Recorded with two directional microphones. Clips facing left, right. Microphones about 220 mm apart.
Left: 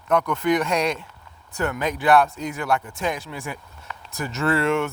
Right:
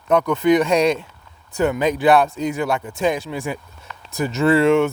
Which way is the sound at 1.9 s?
30° right (ahead or behind).